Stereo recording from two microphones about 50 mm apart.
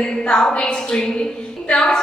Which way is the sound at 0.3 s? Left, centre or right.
Centre.